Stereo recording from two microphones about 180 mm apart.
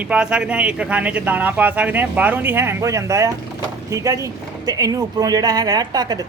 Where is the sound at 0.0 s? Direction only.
5° right (ahead or behind).